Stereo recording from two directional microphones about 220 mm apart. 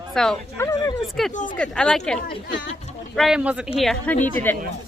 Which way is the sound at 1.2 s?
Centre (ahead or behind).